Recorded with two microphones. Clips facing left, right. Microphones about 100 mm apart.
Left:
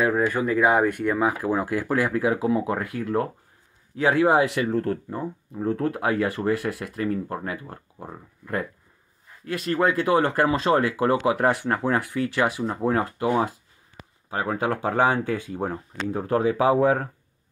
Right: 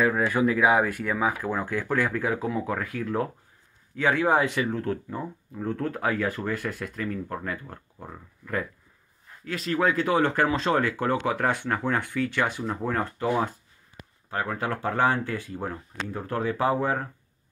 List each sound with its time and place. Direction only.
0.0 s speech: 10° left (ahead or behind)
0.3 s speech: 5° right (ahead or behind)
7.2 s speech: 15° left (ahead or behind)
9.5 s speech: centre (ahead or behind)